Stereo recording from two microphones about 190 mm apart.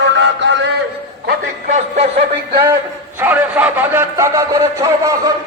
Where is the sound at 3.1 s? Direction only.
10° right (ahead or behind).